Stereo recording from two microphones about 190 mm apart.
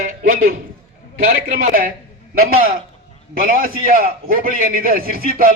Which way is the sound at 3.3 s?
50° right (ahead or behind).